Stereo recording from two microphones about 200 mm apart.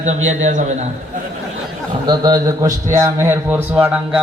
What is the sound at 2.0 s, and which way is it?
A man's voice, 20° right (ahead or behind).